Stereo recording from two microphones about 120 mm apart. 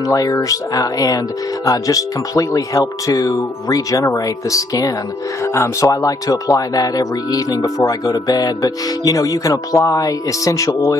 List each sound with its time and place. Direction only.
0.0 s speech: 30° left (ahead or behind)